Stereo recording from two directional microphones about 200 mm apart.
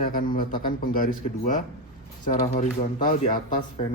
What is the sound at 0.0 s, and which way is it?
Speech, 45° left (ahead or behind).